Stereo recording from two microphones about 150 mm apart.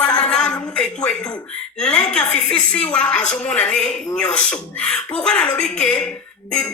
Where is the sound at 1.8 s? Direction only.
5° left (ahead or behind).